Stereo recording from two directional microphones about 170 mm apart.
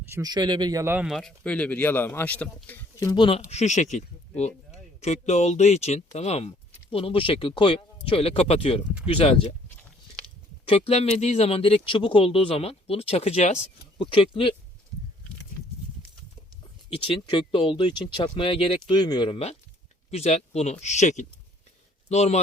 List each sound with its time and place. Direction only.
0.1 s speech: 20° right (ahead or behind)
1.0 s speech: centre (ahead or behind)
3.1 s speech: 30° left (ahead or behind)
10.7 s speech: 35° left (ahead or behind)
16.9 s speech: 30° left (ahead or behind)
20.1 s speech: 40° left (ahead or behind)